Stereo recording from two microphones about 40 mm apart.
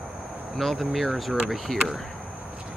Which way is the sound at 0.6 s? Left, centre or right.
Centre.